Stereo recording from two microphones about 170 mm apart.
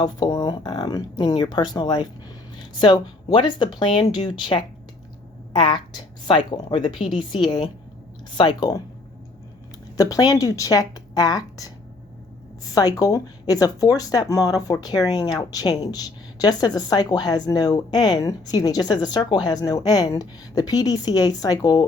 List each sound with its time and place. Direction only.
0.0 s speech: 20° left (ahead or behind)
10.0 s speech: 20° left (ahead or behind)
12.7 s speech: 20° left (ahead or behind)